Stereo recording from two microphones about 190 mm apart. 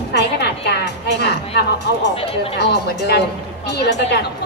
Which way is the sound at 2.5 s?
60° left (ahead or behind).